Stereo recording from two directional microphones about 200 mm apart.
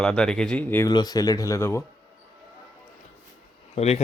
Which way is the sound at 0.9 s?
20° left (ahead or behind).